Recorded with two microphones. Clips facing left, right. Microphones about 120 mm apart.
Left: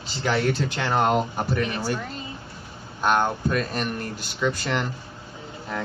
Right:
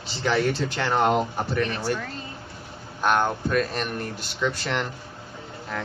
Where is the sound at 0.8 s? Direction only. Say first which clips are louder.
Right 1 dB; 5° left (ahead or behind).